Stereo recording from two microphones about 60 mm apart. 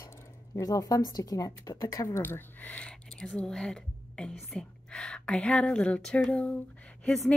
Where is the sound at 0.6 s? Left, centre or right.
Left.